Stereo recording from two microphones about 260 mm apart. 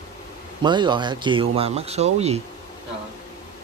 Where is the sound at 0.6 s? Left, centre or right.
Centre.